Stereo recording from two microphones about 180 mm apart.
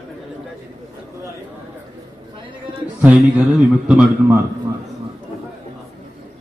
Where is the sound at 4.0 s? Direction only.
10° right (ahead or behind).